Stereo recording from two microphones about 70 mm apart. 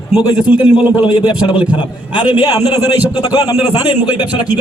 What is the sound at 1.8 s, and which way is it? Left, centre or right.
Speech, left.